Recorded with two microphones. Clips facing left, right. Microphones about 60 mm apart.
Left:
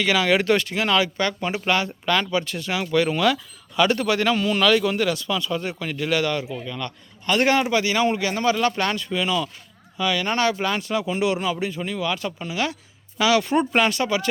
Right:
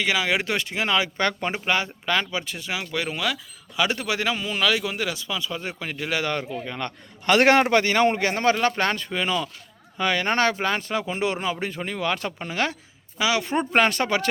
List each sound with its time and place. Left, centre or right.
0.0 s speech: centre
1.2 s speech: right
1.6 s speech: centre
6.3 s speech: right
7.3 s a man's voice: right
11.9 s speech: right
13.1 s speech: centre; by 14.3 s right